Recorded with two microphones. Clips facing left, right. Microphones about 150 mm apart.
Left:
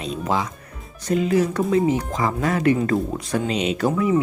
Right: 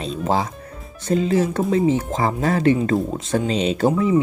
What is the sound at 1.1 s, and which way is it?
Speech, 30° right (ahead or behind).